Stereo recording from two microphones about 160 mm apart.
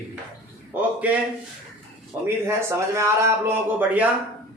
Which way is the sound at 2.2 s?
15° right (ahead or behind).